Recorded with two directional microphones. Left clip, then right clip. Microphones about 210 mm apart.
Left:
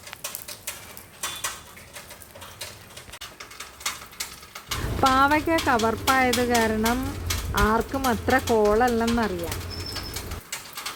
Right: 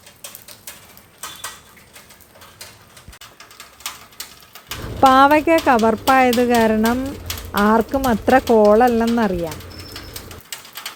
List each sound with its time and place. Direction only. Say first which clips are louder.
4.9 s speech: right 8 dB; 30° right (ahead or behind)